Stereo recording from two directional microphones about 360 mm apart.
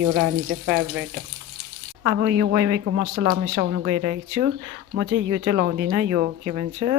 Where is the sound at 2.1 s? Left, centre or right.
Right.